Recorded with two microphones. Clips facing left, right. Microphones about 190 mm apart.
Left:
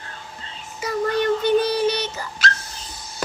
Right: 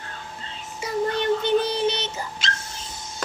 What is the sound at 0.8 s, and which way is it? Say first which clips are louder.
Dog: left 3 dB; 25° right (ahead or behind).